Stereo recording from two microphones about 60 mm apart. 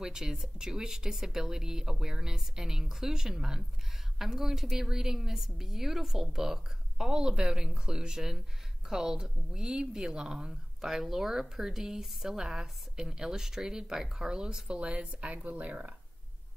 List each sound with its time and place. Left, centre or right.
0.0 s speech: centre